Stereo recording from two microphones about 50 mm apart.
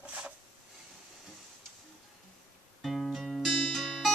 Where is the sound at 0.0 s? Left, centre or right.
Right.